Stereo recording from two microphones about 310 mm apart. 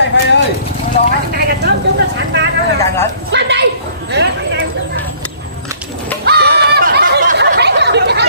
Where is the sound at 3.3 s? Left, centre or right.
Right.